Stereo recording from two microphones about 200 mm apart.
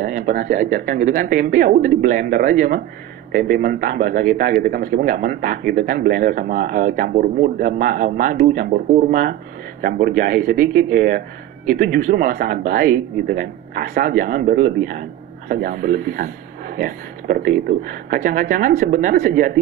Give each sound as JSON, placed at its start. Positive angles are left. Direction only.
{"t": 0.0, "sound": "speech", "side_deg": -45}